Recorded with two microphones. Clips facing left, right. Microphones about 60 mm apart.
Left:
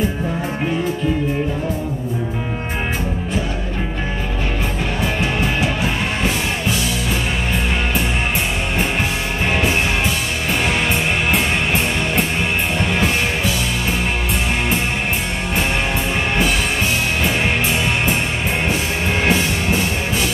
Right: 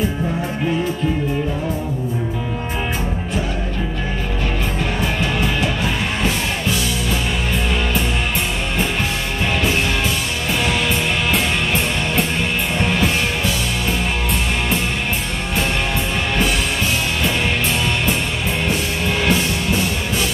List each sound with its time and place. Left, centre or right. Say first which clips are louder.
5.2 s music: left 1 dB; centre
18.7 s music: left 1 dB; left